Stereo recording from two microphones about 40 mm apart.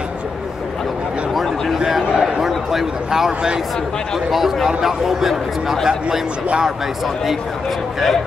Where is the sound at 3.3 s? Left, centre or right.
Right.